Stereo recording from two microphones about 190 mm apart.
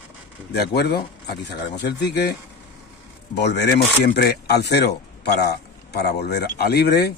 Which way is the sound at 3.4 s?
65° left (ahead or behind).